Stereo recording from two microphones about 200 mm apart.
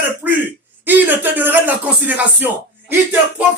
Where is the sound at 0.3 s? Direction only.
10° right (ahead or behind).